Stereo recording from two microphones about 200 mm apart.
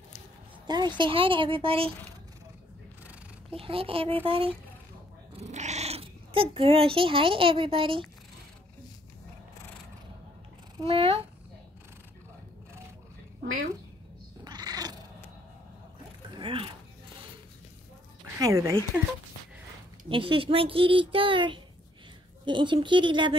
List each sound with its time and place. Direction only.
0.7 s speech: 20° right (ahead or behind)
3.4 s speech: 30° right (ahead or behind)
10.8 s speech: 30° right (ahead or behind)
14.4 s cat: 20° right (ahead or behind)
16.3 s zipper: 25° right (ahead or behind)
18.2 s speech: 15° right (ahead or behind)
20.1 s speech: 25° right (ahead or behind)